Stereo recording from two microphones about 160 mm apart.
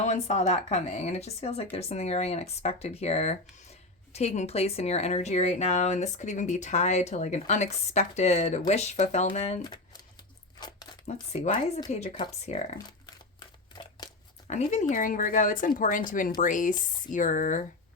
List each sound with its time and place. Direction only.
0.0 s speech: 45° left (ahead or behind)
10.6 s a sound: 25° left (ahead or behind)
11.0 s speech: 45° left (ahead or behind)
14.4 s speech: 45° left (ahead or behind)